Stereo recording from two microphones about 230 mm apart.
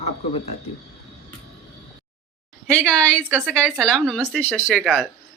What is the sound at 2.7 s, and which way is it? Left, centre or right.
Speech, centre.